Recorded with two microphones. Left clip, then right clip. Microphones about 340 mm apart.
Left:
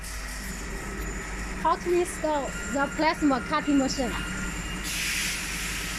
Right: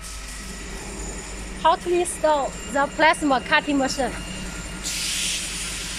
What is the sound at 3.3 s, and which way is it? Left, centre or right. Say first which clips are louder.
Speech: right 5 dB; right.